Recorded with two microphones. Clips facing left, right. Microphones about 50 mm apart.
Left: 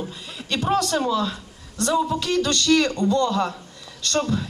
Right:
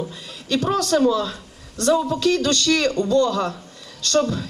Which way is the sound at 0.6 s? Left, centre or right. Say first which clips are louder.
Right 3 dB; left.